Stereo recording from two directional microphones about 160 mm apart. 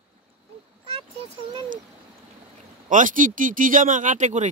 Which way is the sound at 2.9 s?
55° right (ahead or behind).